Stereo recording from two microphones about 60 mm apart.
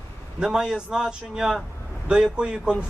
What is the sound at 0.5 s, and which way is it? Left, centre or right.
Speech, centre.